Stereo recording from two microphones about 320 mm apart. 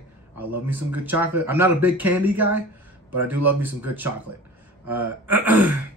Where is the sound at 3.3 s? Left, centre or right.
Right.